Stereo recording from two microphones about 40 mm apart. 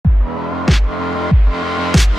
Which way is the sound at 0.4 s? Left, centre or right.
Centre.